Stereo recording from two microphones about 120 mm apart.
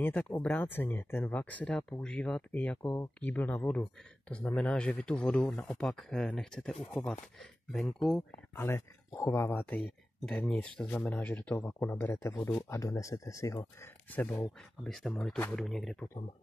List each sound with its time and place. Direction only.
0.0 s speech: 15° left (ahead or behind)
8.5 s speech: 20° left (ahead or behind)
14.8 s speech: 5° left (ahead or behind)